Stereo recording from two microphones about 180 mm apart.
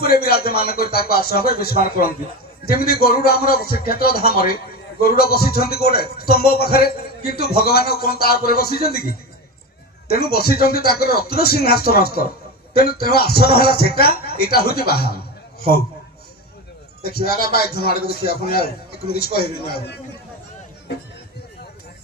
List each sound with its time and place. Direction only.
0.0 s a man's voice: 60° left (ahead or behind)
17.0 s a man's voice: 60° left (ahead or behind)